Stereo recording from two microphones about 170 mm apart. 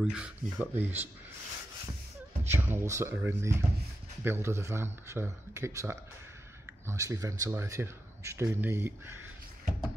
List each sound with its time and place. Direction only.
0.0 s speech: 5° right (ahead or behind)
2.5 s speech: 15° right (ahead or behind)